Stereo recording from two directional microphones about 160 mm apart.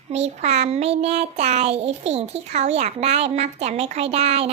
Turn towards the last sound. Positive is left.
turn(degrees=-40)  # may be behind; listen again after turning